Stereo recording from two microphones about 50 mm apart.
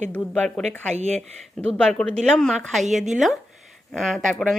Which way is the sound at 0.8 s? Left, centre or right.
Centre.